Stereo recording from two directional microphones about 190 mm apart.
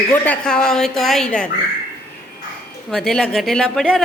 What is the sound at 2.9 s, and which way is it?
Speech, 5° left (ahead or behind).